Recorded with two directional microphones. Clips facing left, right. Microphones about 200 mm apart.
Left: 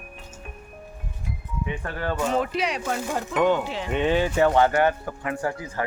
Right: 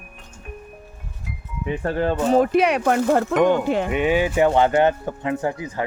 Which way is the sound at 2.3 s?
45° right (ahead or behind).